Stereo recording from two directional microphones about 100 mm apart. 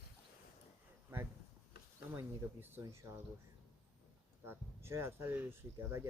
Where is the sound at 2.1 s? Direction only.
20° right (ahead or behind).